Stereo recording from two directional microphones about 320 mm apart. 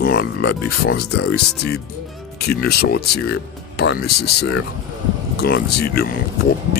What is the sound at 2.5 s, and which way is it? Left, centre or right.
Speech, left.